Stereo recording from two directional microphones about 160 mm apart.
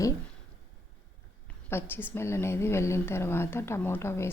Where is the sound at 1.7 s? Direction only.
15° left (ahead or behind).